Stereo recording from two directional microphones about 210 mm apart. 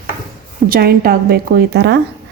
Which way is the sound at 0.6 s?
45° right (ahead or behind).